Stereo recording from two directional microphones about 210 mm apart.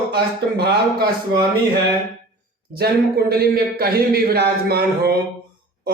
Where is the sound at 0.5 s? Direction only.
45° right (ahead or behind).